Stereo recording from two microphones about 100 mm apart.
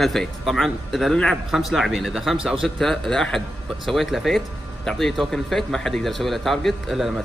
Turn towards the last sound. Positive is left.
turn(degrees=0)  # may be behind; listen again after turning